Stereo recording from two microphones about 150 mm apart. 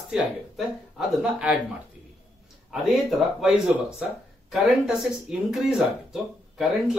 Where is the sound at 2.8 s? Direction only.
Centre (ahead or behind).